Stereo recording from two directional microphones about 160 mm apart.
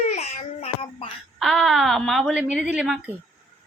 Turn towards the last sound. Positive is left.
turn(degrees=-5)  # may be behind; listen again after turning